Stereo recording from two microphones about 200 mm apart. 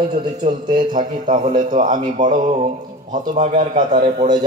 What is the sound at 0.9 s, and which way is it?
A man's voice, 40° right (ahead or behind).